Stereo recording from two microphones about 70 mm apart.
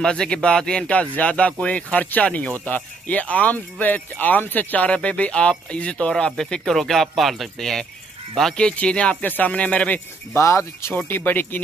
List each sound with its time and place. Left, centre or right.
0.0 s speech: centre
10.3 s speech: left
11.0 s speech: left